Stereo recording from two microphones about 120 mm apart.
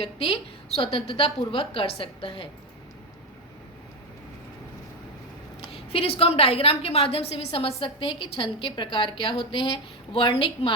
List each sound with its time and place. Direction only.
0.0 s a woman's voice: 55° left (ahead or behind)
5.7 s a woman's voice: 55° left (ahead or behind)